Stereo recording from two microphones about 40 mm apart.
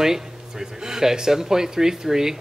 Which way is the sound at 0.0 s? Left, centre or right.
Centre.